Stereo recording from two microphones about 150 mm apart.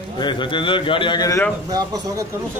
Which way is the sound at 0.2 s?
30° left (ahead or behind).